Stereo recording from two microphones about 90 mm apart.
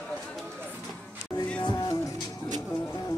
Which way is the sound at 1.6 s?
50° left (ahead or behind).